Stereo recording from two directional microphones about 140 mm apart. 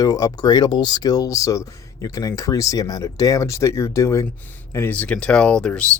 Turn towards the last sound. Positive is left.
turn(degrees=5)  # may be behind; listen again after turning